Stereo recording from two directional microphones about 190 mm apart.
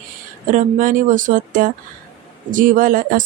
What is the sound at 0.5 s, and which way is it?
Speech, 45° right (ahead or behind).